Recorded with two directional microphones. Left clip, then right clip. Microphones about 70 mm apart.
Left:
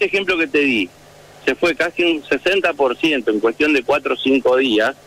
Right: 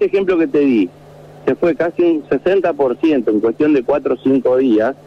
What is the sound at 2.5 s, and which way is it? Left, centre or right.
A man's voice, left.